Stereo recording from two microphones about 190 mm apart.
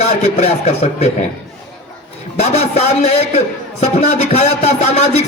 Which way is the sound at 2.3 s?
35° left (ahead or behind).